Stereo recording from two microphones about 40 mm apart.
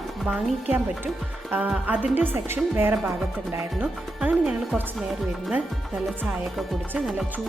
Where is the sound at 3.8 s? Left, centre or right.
Right.